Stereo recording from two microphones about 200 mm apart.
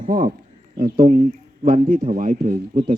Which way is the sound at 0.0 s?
45° right (ahead or behind).